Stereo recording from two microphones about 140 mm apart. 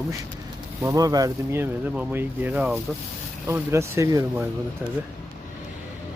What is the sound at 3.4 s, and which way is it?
Speech, 20° right (ahead or behind).